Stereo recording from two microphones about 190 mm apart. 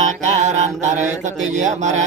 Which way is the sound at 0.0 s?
35° right (ahead or behind).